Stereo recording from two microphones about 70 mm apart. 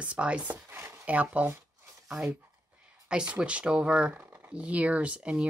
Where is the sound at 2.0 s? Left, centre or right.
Centre.